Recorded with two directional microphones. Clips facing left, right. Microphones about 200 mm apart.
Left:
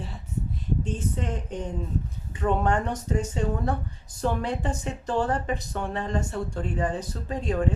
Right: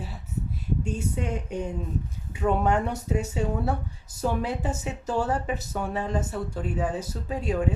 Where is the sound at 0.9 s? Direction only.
10° right (ahead or behind).